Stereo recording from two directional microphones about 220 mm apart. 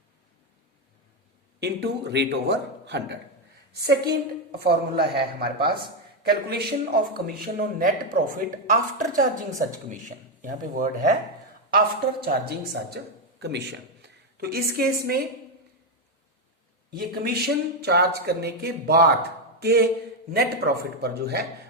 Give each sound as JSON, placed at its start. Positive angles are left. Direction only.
{"t": 1.5, "sound": "a woman's voice", "side_deg": -50}
{"t": 12.2, "sound": "speech", "side_deg": -45}
{"t": 16.9, "sound": "speech", "side_deg": -45}